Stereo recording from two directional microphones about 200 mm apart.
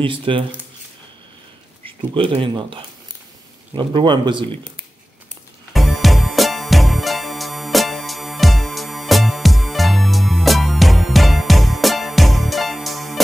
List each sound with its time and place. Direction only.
0.0 s speech: 25° right (ahead or behind)
1.9 s speech: 25° right (ahead or behind)
5.7 s music: centre (ahead or behind)